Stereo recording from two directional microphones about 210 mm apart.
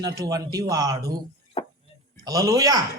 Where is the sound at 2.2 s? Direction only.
15° right (ahead or behind).